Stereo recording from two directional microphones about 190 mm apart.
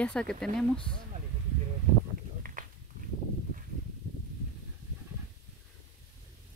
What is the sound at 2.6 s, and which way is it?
Walk, 45° right (ahead or behind).